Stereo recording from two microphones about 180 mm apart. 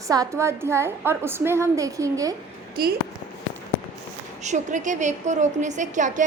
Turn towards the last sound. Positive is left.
turn(degrees=-45)  # may be behind; listen again after turning